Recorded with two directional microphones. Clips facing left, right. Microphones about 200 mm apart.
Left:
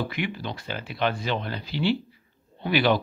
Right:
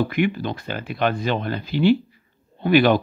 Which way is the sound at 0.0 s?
50° right (ahead or behind).